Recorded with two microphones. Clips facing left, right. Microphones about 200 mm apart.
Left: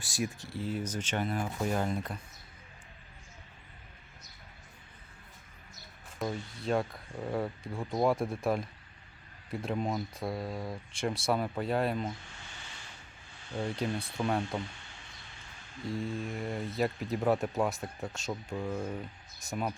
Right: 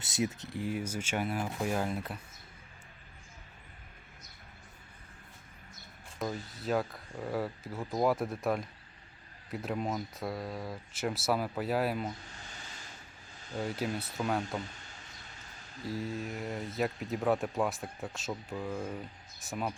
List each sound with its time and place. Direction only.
0.0 s speech: 20° right (ahead or behind); by 2.1 s 5° right (ahead or behind)
6.2 s speech: centre (ahead or behind)
12.3 s a sound: 40° right (ahead or behind)
13.5 s speech: 5° right (ahead or behind)
16.0 s speech: 5° right (ahead or behind)